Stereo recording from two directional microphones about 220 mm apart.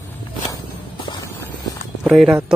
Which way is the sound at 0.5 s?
15° left (ahead or behind).